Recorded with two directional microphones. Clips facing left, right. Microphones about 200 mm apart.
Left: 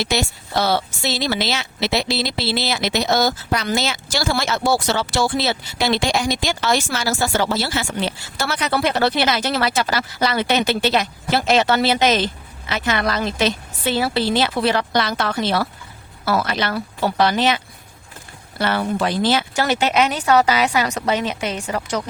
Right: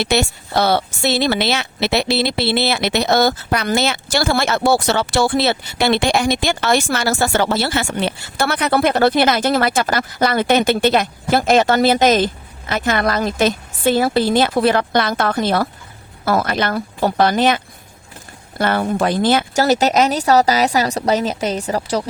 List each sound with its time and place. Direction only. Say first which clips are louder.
0.0 s speech: right 4 dB; 60° right (ahead or behind)
19.6 s a woman's voice: right 4 dB; 40° right (ahead or behind)